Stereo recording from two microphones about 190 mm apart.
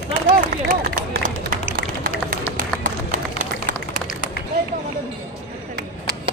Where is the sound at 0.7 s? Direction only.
45° right (ahead or behind).